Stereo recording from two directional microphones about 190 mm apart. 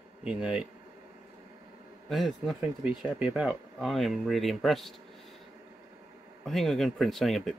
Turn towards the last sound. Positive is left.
turn(degrees=0)  # may be behind; listen again after turning